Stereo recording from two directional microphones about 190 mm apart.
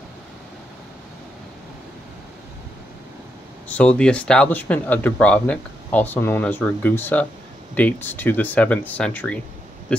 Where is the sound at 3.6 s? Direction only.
5° left (ahead or behind).